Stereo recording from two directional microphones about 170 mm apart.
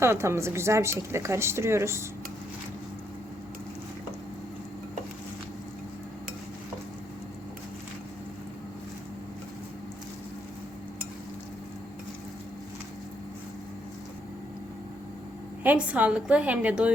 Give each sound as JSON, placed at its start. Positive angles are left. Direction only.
{"t": 0.0, "sound": "a woman's voice", "side_deg": -15}
{"t": 15.6, "sound": "a woman's voice", "side_deg": -10}